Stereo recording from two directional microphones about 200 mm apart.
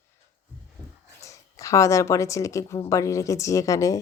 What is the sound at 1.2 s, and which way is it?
A woman's voice, 15° left (ahead or behind).